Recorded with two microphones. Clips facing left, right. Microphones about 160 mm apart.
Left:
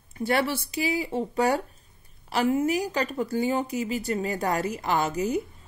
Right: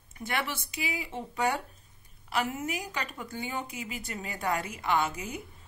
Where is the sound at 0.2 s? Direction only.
35° left (ahead or behind).